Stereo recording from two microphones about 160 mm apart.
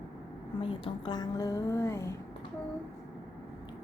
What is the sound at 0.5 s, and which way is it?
Speech, 35° left (ahead or behind).